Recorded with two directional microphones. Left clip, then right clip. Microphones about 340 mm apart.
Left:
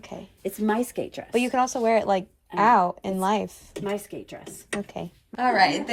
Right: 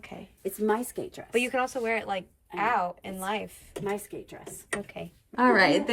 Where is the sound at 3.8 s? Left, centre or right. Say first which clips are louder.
Left 3 dB; centre.